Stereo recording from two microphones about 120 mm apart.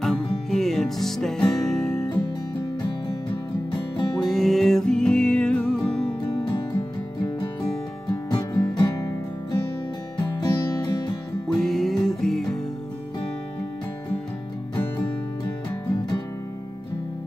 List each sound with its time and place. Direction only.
0.0 s music: 5° left (ahead or behind)
2.8 s music: 40° left (ahead or behind)
4.2 s music: 5° left (ahead or behind)
6.3 s music: 40° left (ahead or behind)
8.1 s music: 35° left (ahead or behind)
11.4 s music: 5° left (ahead or behind)